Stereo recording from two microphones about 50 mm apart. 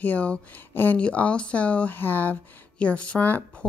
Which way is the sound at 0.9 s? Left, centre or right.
Left.